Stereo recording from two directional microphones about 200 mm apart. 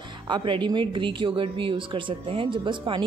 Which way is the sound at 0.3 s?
25° right (ahead or behind).